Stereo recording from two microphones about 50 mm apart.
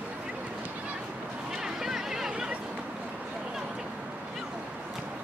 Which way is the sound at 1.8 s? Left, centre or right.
Centre.